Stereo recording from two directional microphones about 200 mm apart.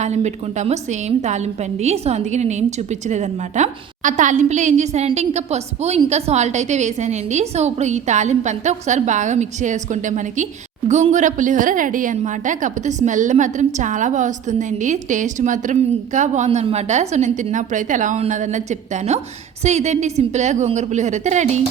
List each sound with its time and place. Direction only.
0.0 s a woman's voice: 35° right (ahead or behind)